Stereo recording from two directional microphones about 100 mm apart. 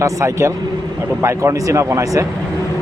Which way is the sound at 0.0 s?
30° right (ahead or behind).